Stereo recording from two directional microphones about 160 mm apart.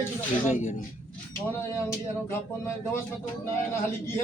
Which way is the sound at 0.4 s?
45° left (ahead or behind).